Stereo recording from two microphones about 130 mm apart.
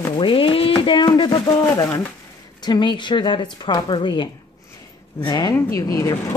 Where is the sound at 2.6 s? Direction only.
35° left (ahead or behind).